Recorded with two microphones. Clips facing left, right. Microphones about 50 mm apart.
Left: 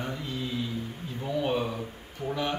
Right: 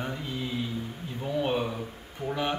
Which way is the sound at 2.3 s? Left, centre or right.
Centre.